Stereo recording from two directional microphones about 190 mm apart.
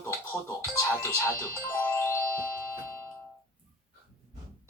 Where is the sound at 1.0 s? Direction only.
15° left (ahead or behind).